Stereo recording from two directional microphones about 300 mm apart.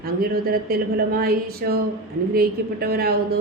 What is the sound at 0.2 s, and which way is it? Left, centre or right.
A woman's voice, right.